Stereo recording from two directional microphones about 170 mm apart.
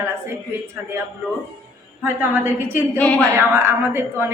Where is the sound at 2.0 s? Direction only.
10° right (ahead or behind).